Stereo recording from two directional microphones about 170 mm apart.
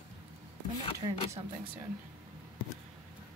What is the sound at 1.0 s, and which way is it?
Speech, 30° right (ahead or behind).